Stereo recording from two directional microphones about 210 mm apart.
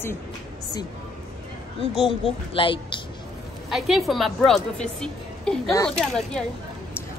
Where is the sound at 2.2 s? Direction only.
25° left (ahead or behind).